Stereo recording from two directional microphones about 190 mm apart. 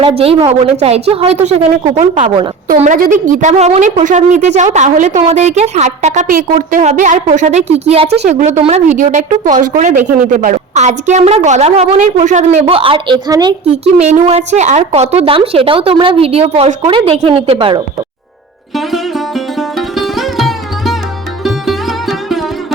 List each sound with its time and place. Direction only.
0.0 s a woman's voice: 30° right (ahead or behind)
13.7 s speech: 35° right (ahead or behind)
18.7 s sitar: centre (ahead or behind)
21.4 s music: centre (ahead or behind)